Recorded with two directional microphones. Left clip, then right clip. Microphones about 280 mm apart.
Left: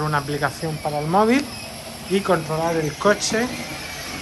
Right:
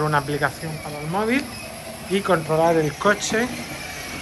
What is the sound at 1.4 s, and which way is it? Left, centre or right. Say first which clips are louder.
Speech: even; centre.